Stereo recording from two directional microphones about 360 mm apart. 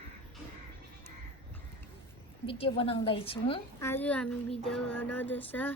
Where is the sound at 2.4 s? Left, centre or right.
Centre.